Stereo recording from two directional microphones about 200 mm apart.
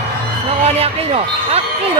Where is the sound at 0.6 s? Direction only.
30° right (ahead or behind).